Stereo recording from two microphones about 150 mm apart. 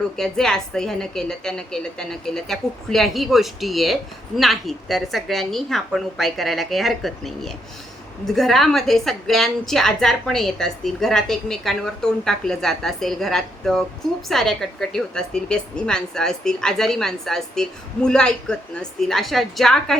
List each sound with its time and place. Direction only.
0.2 s a woman's voice: 5° left (ahead or behind)